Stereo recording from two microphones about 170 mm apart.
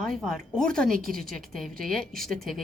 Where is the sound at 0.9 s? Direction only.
55° right (ahead or behind).